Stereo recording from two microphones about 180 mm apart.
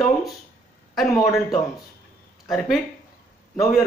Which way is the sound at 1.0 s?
15° left (ahead or behind).